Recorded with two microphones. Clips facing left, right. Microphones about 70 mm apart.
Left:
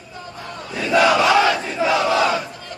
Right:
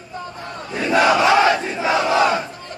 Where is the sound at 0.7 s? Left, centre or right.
Right.